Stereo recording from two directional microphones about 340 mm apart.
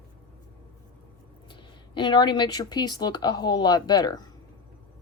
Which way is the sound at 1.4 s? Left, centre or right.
Centre.